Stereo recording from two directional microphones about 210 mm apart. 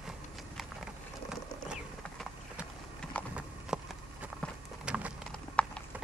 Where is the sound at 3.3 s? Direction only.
5° right (ahead or behind).